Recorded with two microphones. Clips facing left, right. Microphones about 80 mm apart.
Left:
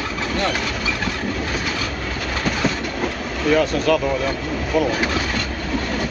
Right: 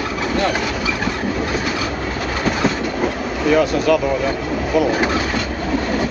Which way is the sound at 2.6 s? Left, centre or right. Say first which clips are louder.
Right 4 dB; centre.